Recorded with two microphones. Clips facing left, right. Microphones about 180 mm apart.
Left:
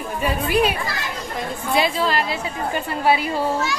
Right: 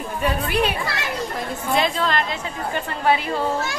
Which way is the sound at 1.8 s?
5° left (ahead or behind).